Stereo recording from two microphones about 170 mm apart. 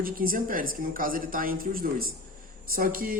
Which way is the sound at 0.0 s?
55° right (ahead or behind).